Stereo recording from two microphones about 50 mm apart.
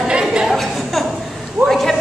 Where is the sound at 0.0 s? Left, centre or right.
Centre.